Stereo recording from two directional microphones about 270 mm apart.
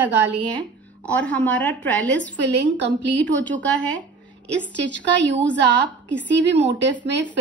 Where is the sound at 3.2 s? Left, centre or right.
Centre.